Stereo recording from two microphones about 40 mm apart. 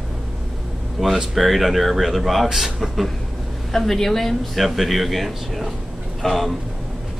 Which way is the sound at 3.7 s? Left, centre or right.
Centre.